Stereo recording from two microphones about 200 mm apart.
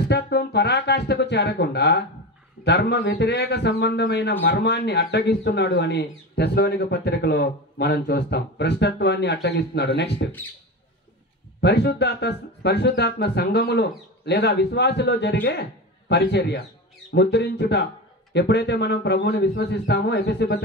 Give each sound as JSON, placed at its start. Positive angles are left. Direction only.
{"t": 0.1, "sound": "speech", "side_deg": 55}
{"t": 11.6, "sound": "speech", "side_deg": 55}